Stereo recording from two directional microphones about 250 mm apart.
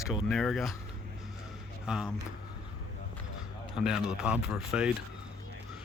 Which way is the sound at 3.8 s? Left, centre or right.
Centre.